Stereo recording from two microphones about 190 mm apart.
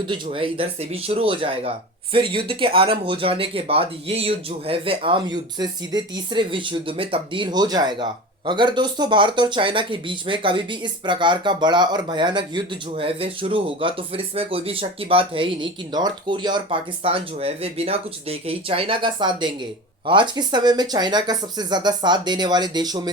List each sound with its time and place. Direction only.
0.1 s speech: 30° right (ahead or behind)